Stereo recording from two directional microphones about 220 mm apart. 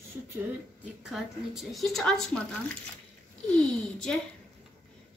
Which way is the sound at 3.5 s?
5° left (ahead or behind).